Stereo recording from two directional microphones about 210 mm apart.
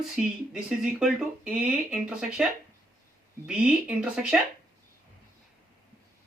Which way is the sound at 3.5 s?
5° right (ahead or behind).